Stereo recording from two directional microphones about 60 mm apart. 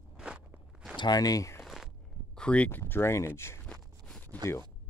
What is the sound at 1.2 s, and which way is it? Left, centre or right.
Speech, left.